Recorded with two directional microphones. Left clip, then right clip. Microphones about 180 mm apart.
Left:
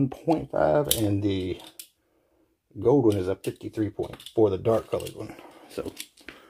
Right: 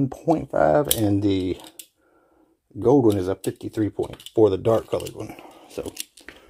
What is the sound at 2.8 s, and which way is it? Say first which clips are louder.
Speech: right 3 dB; 40° right (ahead or behind).